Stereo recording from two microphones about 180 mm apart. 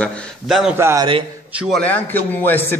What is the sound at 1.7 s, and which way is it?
A man's voice, 10° left (ahead or behind).